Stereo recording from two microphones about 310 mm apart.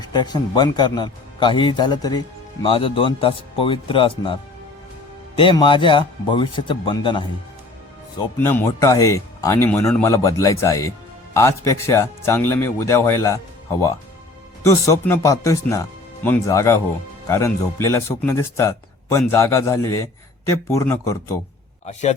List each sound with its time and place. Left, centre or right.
0.0 s a man's voice: centre
5.4 s a man's voice: centre
8.4 s a man's voice: centre